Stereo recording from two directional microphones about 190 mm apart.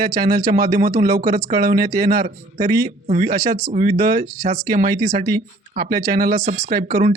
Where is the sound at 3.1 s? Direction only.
40° right (ahead or behind).